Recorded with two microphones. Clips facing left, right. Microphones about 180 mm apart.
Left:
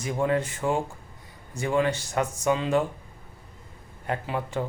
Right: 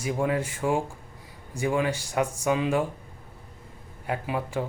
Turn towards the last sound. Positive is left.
turn(degrees=-10)  # may be behind; listen again after turning